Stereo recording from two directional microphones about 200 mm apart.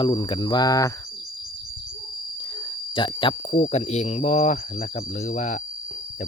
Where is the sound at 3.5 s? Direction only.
35° left (ahead or behind).